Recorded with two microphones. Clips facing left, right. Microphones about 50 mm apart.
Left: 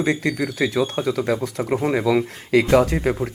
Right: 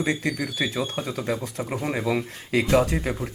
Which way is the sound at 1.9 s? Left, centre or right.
Left.